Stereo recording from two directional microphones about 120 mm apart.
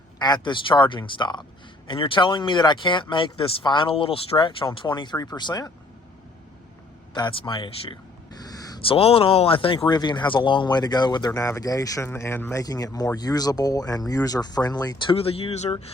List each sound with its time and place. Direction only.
0.2 s speech: 35° left (ahead or behind)
7.1 s speech: 40° left (ahead or behind)
8.4 s a sound: 30° left (ahead or behind)
8.8 s speech: 50° left (ahead or behind)